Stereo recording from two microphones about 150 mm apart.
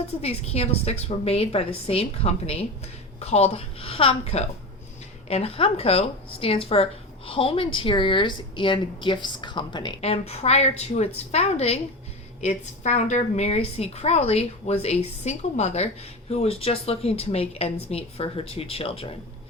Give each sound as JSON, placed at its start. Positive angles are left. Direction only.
{"t": 0.2, "sound": "speech", "side_deg": 45}
{"t": 10.0, "sound": "a woman's voice", "side_deg": 45}